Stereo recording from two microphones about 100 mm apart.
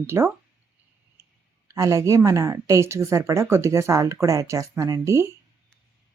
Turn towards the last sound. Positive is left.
turn(degrees=-30)  # may be behind; listen again after turning